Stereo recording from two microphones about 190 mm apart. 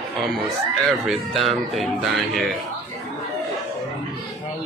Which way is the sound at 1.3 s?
30° right (ahead or behind).